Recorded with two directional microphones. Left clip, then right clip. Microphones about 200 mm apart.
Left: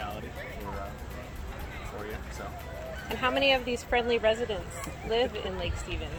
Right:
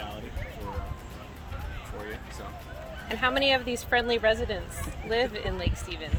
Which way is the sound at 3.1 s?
45° right (ahead or behind).